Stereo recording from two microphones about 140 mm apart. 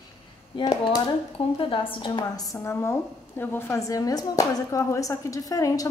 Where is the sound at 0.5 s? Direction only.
35° left (ahead or behind).